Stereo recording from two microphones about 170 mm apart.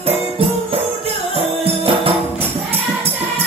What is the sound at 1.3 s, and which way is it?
Music, 35° right (ahead or behind).